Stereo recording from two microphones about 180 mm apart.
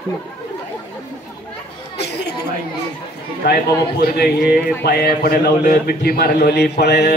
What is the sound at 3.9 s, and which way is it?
A man's voice, 60° left (ahead or behind).